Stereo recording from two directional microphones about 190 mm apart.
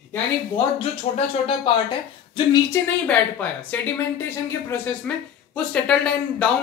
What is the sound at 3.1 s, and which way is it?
Speech, 10° left (ahead or behind).